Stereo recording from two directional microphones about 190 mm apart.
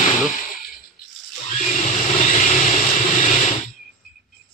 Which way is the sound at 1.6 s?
40° left (ahead or behind).